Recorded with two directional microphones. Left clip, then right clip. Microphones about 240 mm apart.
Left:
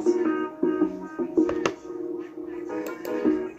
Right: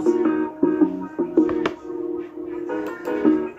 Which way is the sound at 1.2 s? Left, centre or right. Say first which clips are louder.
Right 5 dB; right.